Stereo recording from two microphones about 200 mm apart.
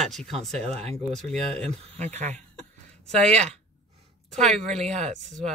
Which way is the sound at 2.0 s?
35° right (ahead or behind).